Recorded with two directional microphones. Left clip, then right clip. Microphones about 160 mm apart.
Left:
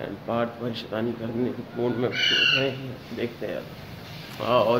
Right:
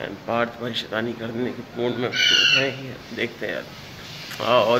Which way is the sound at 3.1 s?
5° right (ahead or behind).